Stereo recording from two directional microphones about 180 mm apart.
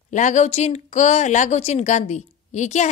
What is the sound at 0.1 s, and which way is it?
A woman's voice, 40° left (ahead or behind).